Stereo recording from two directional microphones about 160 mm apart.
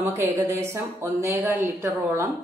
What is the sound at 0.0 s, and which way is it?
Speech, 20° right (ahead or behind).